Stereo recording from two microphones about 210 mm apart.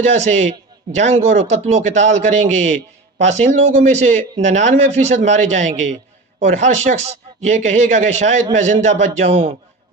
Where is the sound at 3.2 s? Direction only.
35° right (ahead or behind).